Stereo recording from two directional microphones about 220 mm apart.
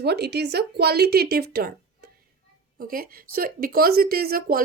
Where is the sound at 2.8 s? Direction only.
40° right (ahead or behind).